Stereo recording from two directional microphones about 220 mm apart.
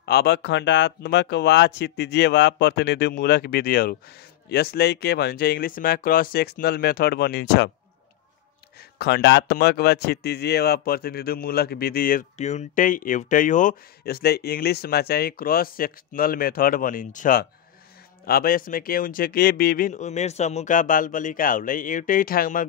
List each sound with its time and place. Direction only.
0.0 s a man's voice: 45° left (ahead or behind)
8.9 s a man's voice: 50° left (ahead or behind)